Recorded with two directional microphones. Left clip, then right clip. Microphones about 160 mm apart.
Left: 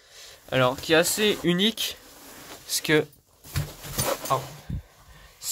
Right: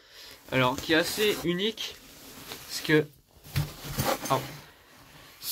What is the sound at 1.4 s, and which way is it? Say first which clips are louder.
Speech: left 5 dB; 30° left (ahead or behind).